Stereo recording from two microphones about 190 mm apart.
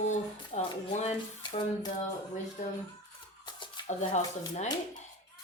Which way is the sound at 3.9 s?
40° left (ahead or behind).